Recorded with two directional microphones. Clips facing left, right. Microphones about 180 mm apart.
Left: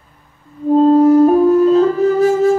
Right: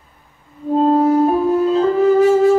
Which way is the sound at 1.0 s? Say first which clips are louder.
Left 5 dB; 40° left (ahead or behind).